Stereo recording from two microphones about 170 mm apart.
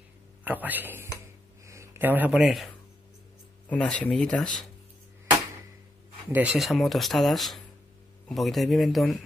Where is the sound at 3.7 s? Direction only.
5° left (ahead or behind).